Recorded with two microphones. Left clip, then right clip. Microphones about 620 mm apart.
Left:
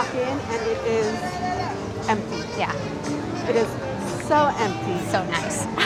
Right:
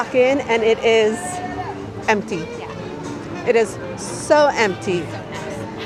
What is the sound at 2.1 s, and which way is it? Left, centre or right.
Speech, right.